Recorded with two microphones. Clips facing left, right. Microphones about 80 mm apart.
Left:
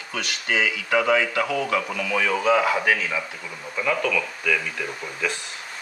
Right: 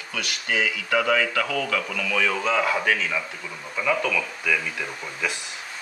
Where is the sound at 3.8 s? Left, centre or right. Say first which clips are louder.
Even; centre.